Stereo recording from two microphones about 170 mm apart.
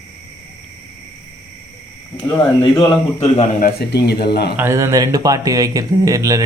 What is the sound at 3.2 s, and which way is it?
Speech, 30° left (ahead or behind).